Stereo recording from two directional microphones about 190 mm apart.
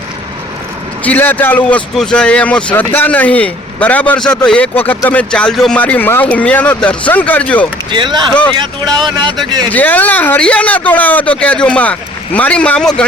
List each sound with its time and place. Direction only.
1.0 s speech: 10° left (ahead or behind)
7.9 s speech: 25° right (ahead or behind)
9.6 s speech: 10° left (ahead or behind)